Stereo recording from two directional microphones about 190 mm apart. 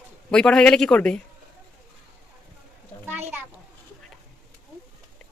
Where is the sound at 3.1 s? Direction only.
10° right (ahead or behind).